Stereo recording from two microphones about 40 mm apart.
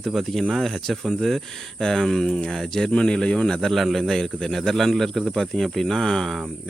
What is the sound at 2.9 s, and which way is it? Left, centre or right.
Speech, left.